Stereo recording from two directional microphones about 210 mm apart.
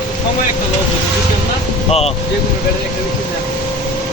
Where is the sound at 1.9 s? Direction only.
30° left (ahead or behind).